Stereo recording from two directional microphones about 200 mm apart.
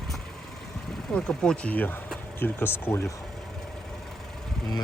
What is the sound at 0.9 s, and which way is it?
Speech, centre (ahead or behind).